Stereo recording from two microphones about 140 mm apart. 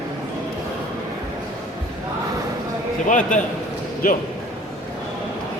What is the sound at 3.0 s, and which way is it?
Speech, 65° left (ahead or behind).